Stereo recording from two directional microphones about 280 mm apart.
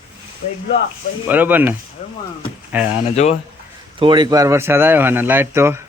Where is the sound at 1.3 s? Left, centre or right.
Centre.